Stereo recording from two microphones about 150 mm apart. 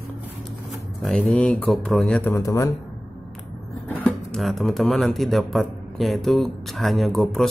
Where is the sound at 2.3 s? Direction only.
20° left (ahead or behind).